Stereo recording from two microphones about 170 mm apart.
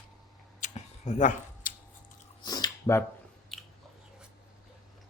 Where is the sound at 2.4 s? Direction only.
25° left (ahead or behind).